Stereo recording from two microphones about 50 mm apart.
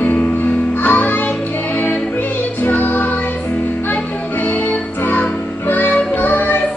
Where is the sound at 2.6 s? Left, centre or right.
Left.